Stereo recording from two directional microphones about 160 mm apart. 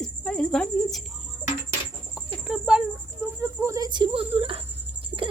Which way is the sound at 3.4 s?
20° right (ahead or behind).